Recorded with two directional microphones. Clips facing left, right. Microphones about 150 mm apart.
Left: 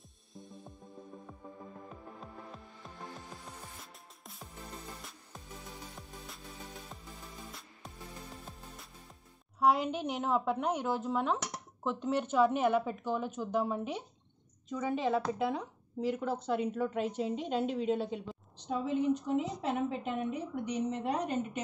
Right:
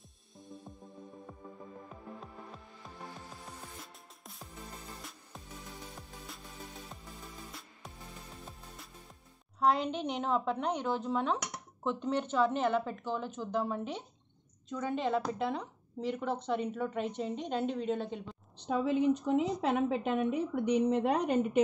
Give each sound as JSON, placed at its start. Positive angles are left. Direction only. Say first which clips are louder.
{"t": 0.4, "sound": "music", "louder": "right 1 dB", "side_deg": 0}
{"t": 9.6, "sound": "speech", "louder": "left 1 dB", "side_deg": 10}
{"t": 18.7, "sound": "a woman's voice", "louder": "right 2 dB", "side_deg": -70}